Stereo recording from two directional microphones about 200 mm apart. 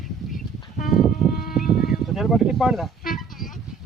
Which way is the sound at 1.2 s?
Centre (ahead or behind).